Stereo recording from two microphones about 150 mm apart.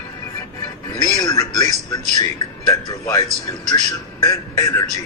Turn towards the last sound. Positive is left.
turn(degrees=20)  # may be behind; listen again after turning